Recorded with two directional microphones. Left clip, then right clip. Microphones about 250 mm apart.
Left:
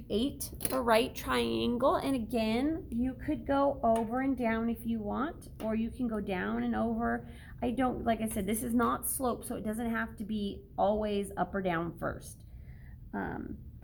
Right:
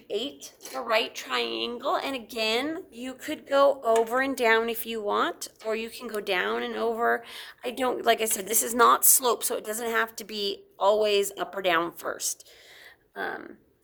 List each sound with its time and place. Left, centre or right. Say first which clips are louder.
0.1 s a woman's voice: right 2 dB; centre
2.2 s a woman's voice: right 4 dB; centre
2.5 s speech: right 5 dB; right